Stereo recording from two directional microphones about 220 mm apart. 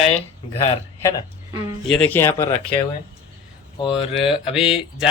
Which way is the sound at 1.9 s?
5° left (ahead or behind).